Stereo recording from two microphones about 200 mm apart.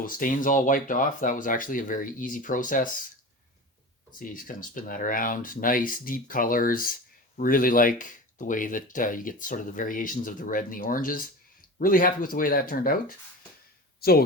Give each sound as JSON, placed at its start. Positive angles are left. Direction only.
{"t": 0.0, "sound": "speech", "side_deg": 40}
{"t": 4.2, "sound": "speech", "side_deg": 40}